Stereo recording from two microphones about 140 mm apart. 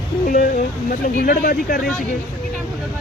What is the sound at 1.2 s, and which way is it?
Speech, 90° left.